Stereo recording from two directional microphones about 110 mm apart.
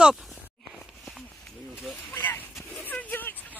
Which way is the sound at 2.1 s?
20° left (ahead or behind).